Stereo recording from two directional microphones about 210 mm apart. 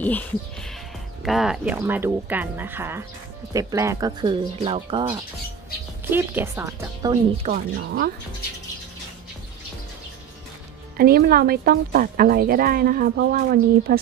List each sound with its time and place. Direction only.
0.0 s speech: 5° left (ahead or behind); by 5.2 s 25° right (ahead or behind)
6.0 s speech: 10° right (ahead or behind)
7.4 s speech: 45° right (ahead or behind)
11.0 s speech: 45° right (ahead or behind)